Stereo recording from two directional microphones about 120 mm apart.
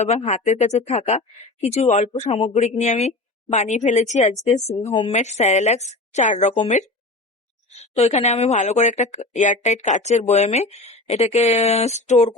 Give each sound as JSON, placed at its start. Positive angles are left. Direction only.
{"t": 0.0, "sound": "a woman's voice", "side_deg": 65}
{"t": 3.5, "sound": "speech", "side_deg": 80}
{"t": 7.7, "sound": "speech", "side_deg": 60}